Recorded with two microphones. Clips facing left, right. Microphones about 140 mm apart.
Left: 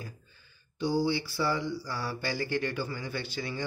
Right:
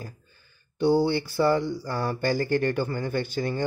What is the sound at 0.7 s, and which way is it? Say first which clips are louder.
Speech: right 6 dB; 60° right (ahead or behind).